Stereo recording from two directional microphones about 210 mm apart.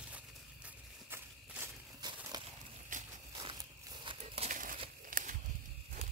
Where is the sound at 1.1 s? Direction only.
10° right (ahead or behind).